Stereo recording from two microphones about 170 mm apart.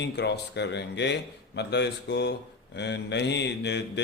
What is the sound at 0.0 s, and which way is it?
A man's voice, 90° left.